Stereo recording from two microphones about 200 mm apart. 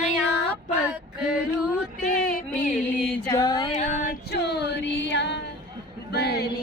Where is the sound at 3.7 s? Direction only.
35° left (ahead or behind); by 5.4 s 60° left (ahead or behind).